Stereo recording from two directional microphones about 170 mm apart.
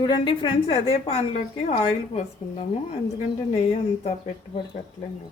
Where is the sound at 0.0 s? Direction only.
30° left (ahead or behind).